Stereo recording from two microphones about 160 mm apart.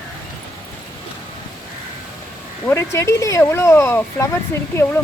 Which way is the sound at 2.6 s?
15° left (ahead or behind).